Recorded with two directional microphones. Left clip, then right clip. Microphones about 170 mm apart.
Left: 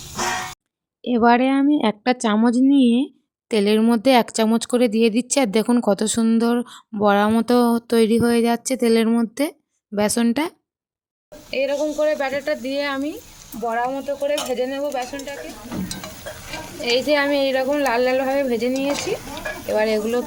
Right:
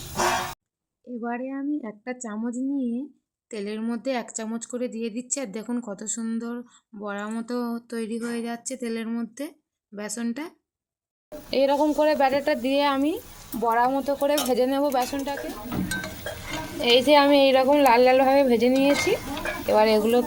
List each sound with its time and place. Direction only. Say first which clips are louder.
1.0 s speech: left 16 dB; 65° left (ahead or behind)
11.5 s speech: even; 45° right (ahead or behind)
14.2 s speech: left 1 dB; 50° right (ahead or behind)
16.8 s speech: right 1 dB; 15° right (ahead or behind)